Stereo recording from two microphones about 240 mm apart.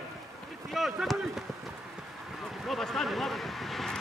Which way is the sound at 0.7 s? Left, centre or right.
Centre.